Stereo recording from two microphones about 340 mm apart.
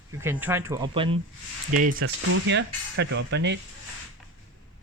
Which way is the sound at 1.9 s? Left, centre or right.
Right.